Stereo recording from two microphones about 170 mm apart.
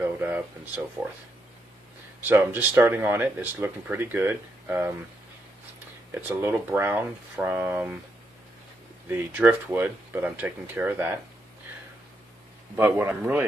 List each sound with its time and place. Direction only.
0.0 s speech: 10° right (ahead or behind)
1.0 s speech: 25° right (ahead or behind)
2.2 s speech: 10° right (ahead or behind)
6.1 s speech: 10° right (ahead or behind)
9.1 s speech: 10° right (ahead or behind)
12.7 s speech: 15° right (ahead or behind)